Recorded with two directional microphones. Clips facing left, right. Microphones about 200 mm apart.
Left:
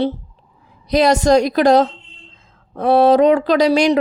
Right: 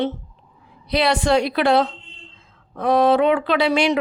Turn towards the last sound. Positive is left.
turn(degrees=40)  # may be behind; listen again after turning